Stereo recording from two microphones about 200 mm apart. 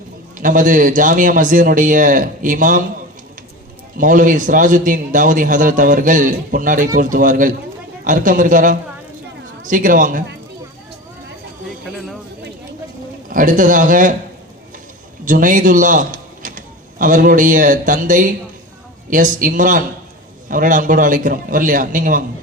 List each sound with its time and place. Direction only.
0.3 s a man's voice: 40° right (ahead or behind)
3.9 s a man's voice: 40° right (ahead or behind)
13.3 s a man's voice: 40° right (ahead or behind)
15.2 s a man's voice: 40° right (ahead or behind)